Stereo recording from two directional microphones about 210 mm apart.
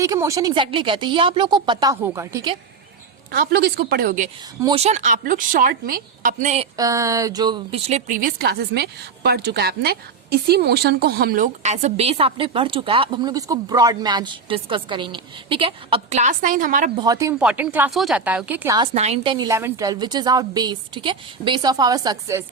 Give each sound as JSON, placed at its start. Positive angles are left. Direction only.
{"t": 0.0, "sound": "a woman's voice", "side_deg": -15}
{"t": 3.3, "sound": "speech", "side_deg": -50}
{"t": 4.6, "sound": "a woman's voice", "side_deg": -30}
{"t": 6.7, "sound": "a woman's voice", "side_deg": -15}
{"t": 17.0, "sound": "speech", "side_deg": -15}
{"t": 18.9, "sound": "a woman's voice", "side_deg": -30}